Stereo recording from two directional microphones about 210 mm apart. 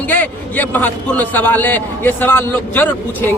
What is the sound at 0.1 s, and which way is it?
A man's voice, 10° left (ahead or behind).